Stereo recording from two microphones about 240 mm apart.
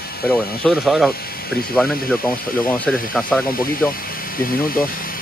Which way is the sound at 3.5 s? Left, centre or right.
Left.